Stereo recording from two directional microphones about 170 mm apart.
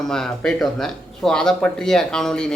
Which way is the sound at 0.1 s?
5° left (ahead or behind).